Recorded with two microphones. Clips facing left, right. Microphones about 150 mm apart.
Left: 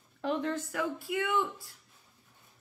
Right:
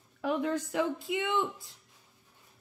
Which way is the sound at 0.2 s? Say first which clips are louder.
Right 2 dB; 10° right (ahead or behind).